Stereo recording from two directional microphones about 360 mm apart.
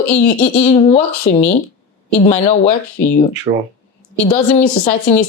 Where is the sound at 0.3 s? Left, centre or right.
Centre.